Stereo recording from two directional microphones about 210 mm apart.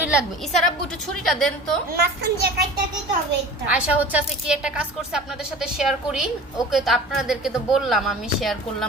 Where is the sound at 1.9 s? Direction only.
50° right (ahead or behind).